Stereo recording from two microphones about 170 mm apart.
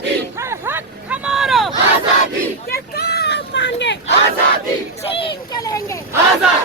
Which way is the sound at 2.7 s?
70° left (ahead or behind).